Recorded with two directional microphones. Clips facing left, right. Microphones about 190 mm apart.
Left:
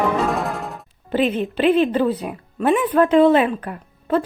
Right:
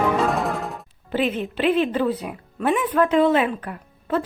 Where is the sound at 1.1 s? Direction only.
35° left (ahead or behind).